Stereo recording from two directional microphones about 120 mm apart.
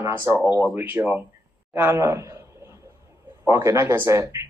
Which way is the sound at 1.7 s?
20° right (ahead or behind).